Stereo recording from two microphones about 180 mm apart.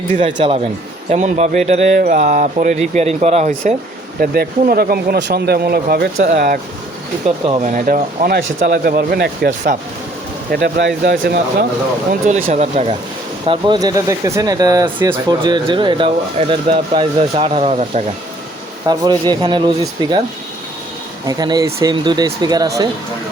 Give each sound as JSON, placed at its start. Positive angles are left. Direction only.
{"t": 0.3, "sound": "speech", "side_deg": -30}
{"t": 1.1, "sound": "speech", "side_deg": -40}
{"t": 4.2, "sound": "speech", "side_deg": -55}
{"t": 7.3, "sound": "speech", "side_deg": -35}
{"t": 7.7, "sound": "speech", "side_deg": -50}
{"t": 10.5, "sound": "speech", "side_deg": -65}
{"t": 12.5, "sound": "speech", "side_deg": -35}
{"t": 13.5, "sound": "speech", "side_deg": -25}
{"t": 18.9, "sound": "speech", "side_deg": -25}
{"t": 21.2, "sound": "speech", "side_deg": -20}